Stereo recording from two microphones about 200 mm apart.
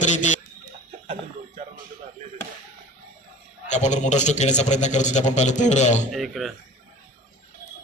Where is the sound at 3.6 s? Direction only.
35° left (ahead or behind).